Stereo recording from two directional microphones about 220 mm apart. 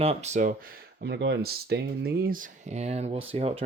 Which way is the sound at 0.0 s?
30° right (ahead or behind).